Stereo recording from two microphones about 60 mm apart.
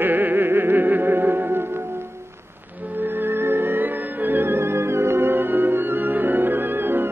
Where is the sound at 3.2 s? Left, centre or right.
Right.